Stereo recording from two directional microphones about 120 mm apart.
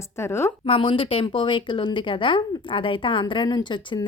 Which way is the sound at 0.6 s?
50° left (ahead or behind).